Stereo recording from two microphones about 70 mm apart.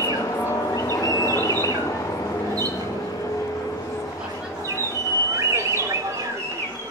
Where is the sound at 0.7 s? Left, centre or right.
Left.